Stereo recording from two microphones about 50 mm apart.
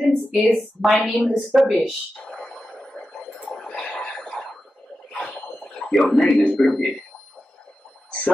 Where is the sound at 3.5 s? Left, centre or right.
Centre.